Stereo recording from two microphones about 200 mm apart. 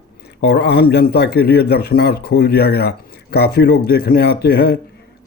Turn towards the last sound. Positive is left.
turn(degrees=50)  # may be behind; listen again after turning